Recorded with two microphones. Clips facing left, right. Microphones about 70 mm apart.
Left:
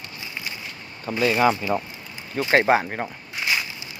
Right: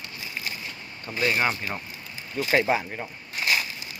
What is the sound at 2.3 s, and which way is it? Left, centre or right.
Speech, left.